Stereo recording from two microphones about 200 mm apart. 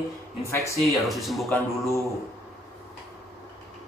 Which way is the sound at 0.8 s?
Centre (ahead or behind).